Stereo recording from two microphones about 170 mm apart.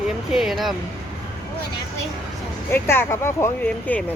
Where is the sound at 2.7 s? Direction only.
15° left (ahead or behind).